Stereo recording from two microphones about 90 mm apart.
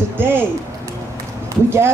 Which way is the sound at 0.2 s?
25° right (ahead or behind).